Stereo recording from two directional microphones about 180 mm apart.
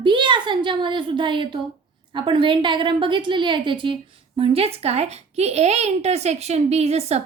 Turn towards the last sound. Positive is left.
turn(degrees=-35)  # may be behind; listen again after turning